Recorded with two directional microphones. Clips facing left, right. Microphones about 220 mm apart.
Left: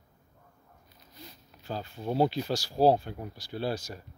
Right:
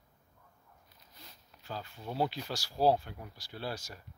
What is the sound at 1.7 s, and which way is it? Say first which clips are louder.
Speech: left 8 dB; 30° left (ahead or behind).